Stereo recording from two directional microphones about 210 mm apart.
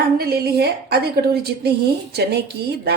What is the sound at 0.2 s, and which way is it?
Speech, 50° right (ahead or behind).